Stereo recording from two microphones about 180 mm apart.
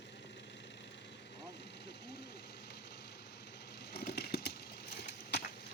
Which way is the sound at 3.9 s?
60° left (ahead or behind).